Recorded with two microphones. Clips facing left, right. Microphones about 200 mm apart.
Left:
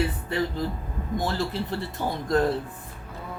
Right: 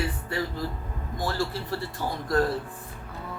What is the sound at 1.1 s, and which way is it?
A man's voice, 20° left (ahead or behind).